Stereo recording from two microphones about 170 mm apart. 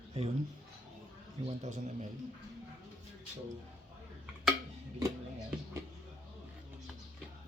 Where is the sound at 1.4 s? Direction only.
40° right (ahead or behind).